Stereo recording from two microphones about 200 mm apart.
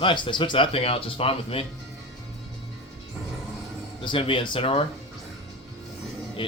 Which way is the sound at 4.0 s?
25° left (ahead or behind).